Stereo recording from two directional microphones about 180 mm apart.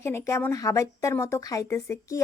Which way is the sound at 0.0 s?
15° left (ahead or behind).